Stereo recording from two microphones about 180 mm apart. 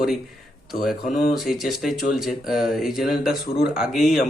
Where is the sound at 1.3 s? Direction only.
Centre (ahead or behind).